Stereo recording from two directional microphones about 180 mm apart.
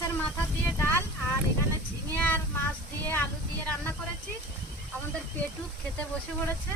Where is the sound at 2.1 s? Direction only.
10° left (ahead or behind).